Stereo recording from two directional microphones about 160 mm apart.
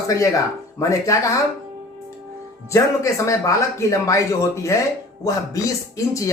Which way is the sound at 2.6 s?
20° left (ahead or behind).